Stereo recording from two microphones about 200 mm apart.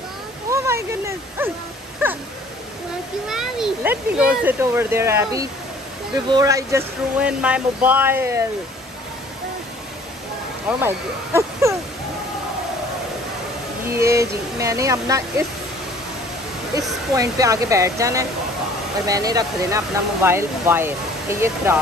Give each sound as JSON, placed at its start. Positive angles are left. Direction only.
{"t": 0.5, "sound": "speech", "side_deg": -15}
{"t": 3.3, "sound": "speech", "side_deg": 0}
{"t": 7.2, "sound": "speech", "side_deg": -5}
{"t": 10.8, "sound": "speech", "side_deg": -10}
{"t": 13.8, "sound": "speech", "side_deg": -15}
{"t": 17.1, "sound": "speech", "side_deg": -15}